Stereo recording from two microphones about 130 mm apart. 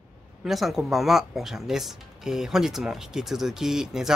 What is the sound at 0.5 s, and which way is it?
Speech, centre (ahead or behind).